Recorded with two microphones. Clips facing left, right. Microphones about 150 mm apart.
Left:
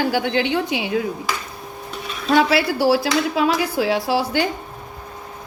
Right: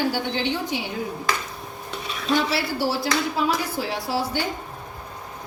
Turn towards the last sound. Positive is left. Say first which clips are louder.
# left 6 dB
turn(degrees=90)